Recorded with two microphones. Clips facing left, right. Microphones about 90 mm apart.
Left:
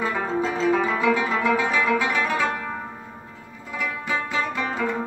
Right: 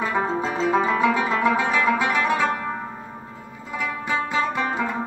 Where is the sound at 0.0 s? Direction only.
20° right (ahead or behind).